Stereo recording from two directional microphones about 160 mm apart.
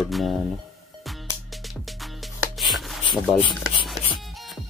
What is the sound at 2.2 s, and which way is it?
Music, centre (ahead or behind).